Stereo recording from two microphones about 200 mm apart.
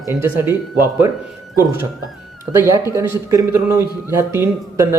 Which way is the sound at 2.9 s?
15° right (ahead or behind).